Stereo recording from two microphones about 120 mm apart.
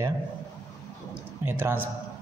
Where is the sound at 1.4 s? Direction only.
20° right (ahead or behind).